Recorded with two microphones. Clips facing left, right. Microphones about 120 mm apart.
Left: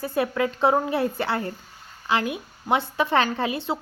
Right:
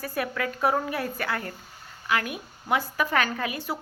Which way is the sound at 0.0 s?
25° left (ahead or behind).